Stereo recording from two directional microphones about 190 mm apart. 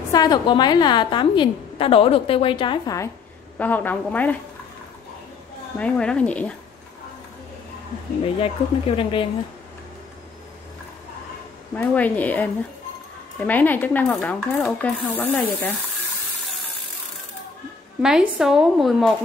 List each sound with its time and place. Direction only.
0.1 s a woman's voice: 20° left (ahead or behind)
3.5 s a sound: 10° left (ahead or behind)
5.8 s speech: 5° left (ahead or behind)
8.2 s a woman's voice: 30° left (ahead or behind)
11.7 s a sound: 5° left (ahead or behind)
18.0 s speech: 5° right (ahead or behind)